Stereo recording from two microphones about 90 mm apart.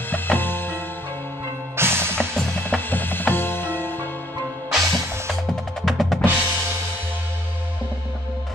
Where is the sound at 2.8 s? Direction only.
20° left (ahead or behind).